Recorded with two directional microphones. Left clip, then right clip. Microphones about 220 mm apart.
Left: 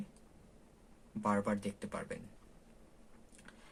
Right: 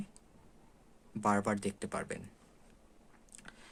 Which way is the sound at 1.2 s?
50° right (ahead or behind).